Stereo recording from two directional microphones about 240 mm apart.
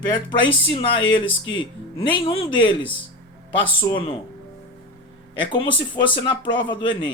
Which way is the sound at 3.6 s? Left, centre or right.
Centre.